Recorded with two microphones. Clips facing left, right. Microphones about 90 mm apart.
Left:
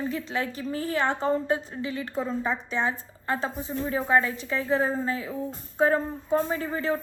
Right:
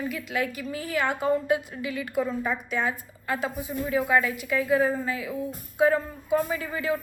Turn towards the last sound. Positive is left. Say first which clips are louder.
# left 1 dB
turn(degrees=30)  # may be behind; listen again after turning